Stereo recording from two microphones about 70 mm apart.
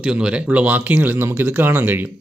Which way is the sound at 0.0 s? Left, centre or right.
Centre.